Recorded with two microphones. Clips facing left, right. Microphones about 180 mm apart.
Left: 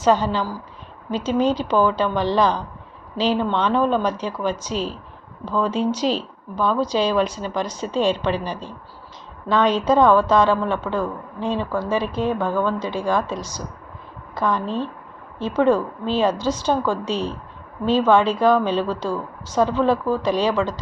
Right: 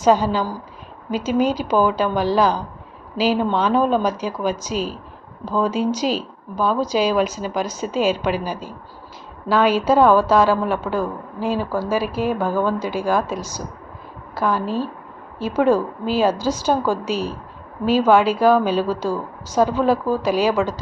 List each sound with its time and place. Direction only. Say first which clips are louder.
0.0 s a woman's voice: right 2 dB; 10° right (ahead or behind)